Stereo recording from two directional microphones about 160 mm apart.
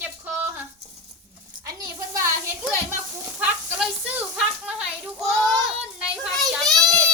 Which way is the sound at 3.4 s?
5° right (ahead or behind).